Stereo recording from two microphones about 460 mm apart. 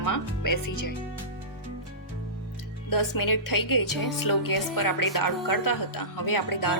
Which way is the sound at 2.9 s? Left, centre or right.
Left.